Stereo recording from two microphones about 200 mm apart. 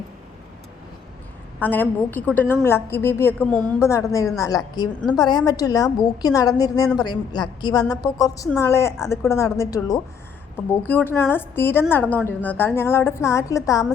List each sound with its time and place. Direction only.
1.5 s a woman's voice: 10° left (ahead or behind)
3.8 s a woman's voice: 15° left (ahead or behind)